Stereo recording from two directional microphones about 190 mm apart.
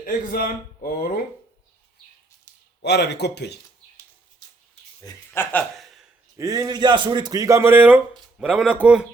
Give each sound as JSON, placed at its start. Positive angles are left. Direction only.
{"t": 0.0, "sound": "speech", "side_deg": 50}
{"t": 2.8, "sound": "speech", "side_deg": 60}
{"t": 5.0, "sound": "a sound", "side_deg": 10}
{"t": 6.3, "sound": "a man's voice", "side_deg": -15}